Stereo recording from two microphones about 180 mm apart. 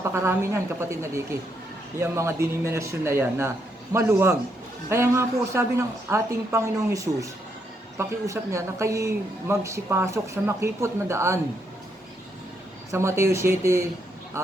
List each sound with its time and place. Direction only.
0.0 s speech: 15° right (ahead or behind)
12.9 s speech: 15° right (ahead or behind)